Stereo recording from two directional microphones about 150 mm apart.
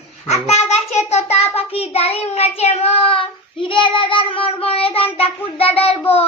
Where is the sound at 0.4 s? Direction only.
45° left (ahead or behind).